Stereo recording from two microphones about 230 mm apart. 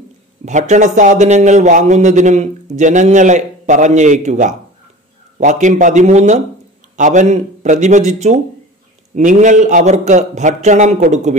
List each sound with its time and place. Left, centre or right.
0.5 s speech: right